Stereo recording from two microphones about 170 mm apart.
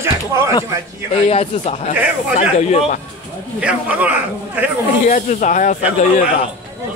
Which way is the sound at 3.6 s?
10° right (ahead or behind).